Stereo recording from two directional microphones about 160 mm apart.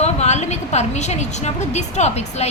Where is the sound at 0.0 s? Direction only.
45° left (ahead or behind).